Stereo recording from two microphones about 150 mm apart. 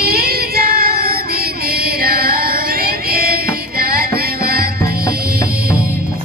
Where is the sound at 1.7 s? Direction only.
90° right.